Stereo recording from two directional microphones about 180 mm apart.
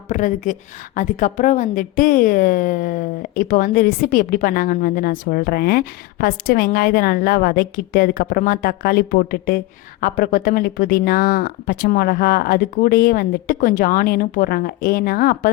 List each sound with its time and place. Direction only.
0.1 s a woman's voice: 45° left (ahead or behind)